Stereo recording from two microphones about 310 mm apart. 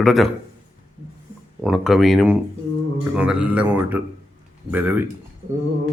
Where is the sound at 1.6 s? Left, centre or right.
Centre.